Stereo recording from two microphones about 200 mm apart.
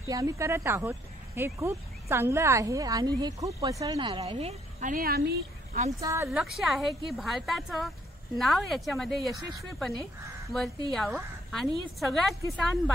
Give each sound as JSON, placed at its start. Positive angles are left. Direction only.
{"t": 0.1, "sound": "speech", "side_deg": -15}
{"t": 4.2, "sound": "a woman's voice", "side_deg": -30}
{"t": 5.9, "sound": "speech", "side_deg": -15}
{"t": 6.4, "sound": "a woman's voice", "side_deg": 0}
{"t": 10.5, "sound": "a woman's voice", "side_deg": 0}